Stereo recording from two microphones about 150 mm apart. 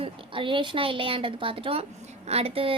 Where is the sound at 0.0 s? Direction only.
35° right (ahead or behind).